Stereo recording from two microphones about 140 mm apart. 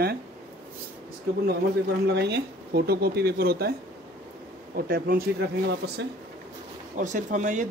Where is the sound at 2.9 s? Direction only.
90° right.